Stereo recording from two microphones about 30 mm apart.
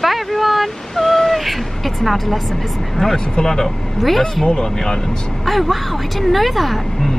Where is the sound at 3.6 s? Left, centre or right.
Centre.